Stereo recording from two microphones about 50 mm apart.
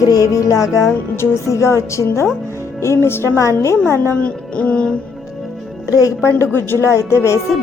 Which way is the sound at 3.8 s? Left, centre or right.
Left.